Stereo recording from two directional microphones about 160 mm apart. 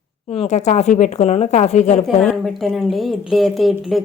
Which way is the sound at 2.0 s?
5° left (ahead or behind).